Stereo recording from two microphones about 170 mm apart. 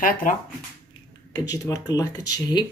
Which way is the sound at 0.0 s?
55° left (ahead or behind).